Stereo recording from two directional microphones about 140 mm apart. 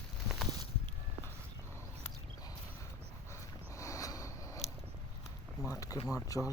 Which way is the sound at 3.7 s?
20° left (ahead or behind).